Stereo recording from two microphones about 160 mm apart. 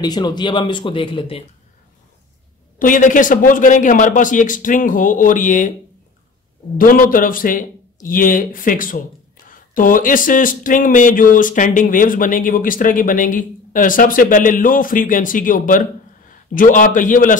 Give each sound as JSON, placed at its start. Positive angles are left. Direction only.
{"t": 0.0, "sound": "speech", "side_deg": 25}
{"t": 2.8, "sound": "speech", "side_deg": 55}
{"t": 6.8, "sound": "speech", "side_deg": 60}